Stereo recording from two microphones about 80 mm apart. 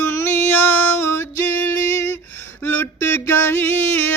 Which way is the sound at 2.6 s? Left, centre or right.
Left.